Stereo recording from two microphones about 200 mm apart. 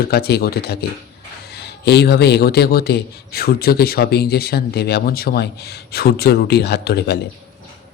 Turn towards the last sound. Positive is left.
turn(degrees=55)  # may be behind; listen again after turning